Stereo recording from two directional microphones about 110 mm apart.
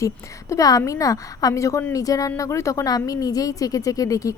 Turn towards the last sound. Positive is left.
turn(degrees=30)  # may be behind; listen again after turning